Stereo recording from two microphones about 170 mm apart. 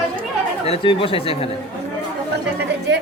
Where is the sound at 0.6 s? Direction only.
35° left (ahead or behind).